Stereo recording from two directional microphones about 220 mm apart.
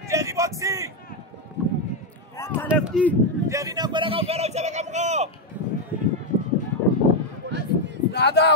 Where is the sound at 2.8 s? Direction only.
5° left (ahead or behind).